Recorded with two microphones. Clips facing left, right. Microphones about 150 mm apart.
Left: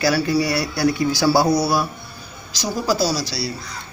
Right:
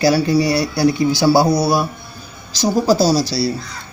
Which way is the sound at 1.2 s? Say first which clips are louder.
Right 3 dB; 10° right (ahead or behind).